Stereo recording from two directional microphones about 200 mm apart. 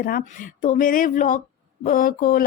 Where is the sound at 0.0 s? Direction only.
45° left (ahead or behind).